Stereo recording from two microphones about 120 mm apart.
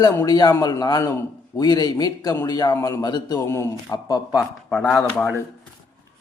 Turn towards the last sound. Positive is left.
turn(degrees=10)  # may be behind; listen again after turning